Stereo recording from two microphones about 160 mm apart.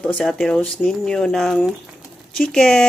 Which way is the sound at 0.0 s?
5° left (ahead or behind).